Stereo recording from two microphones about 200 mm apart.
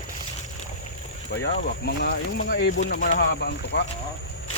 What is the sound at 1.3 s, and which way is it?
Speech, 55° left (ahead or behind).